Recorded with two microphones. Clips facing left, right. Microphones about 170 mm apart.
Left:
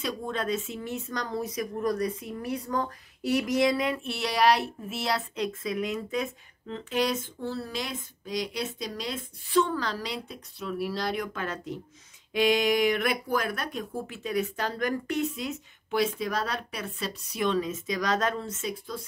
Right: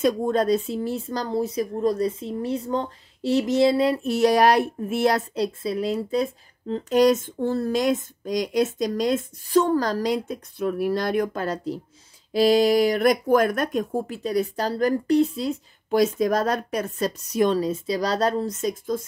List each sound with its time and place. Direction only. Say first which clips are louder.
0.0 s speech: right 10 dB; 45° right (ahead or behind)
5.3 s speech: right 5 dB; 35° right (ahead or behind)